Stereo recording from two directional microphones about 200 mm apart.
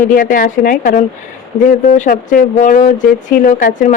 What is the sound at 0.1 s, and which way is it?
Speech, 45° left (ahead or behind).